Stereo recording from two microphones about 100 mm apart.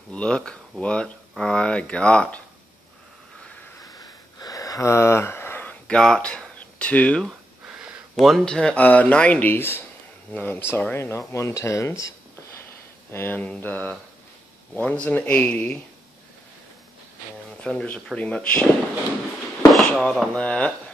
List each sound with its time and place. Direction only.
0.1 s speech: 10° left (ahead or behind)
3.8 s a sound: 35° left (ahead or behind); by 7.2 s 15° left (ahead or behind)
7.2 s a sound: 10° right (ahead or behind)
8.2 s speech: centre (ahead or behind); by 12.1 s 30° left (ahead or behind)
13.1 s speech: 20° left (ahead or behind)
17.6 s speech: 10° left (ahead or behind)
19.7 s speech: 10° left (ahead or behind)